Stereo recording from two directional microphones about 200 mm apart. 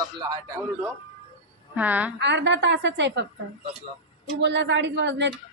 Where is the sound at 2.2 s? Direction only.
60° right (ahead or behind).